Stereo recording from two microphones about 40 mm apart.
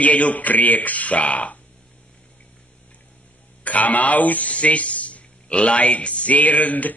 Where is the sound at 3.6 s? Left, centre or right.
Left.